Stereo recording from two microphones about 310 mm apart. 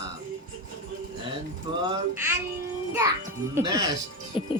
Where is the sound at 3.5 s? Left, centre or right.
Centre.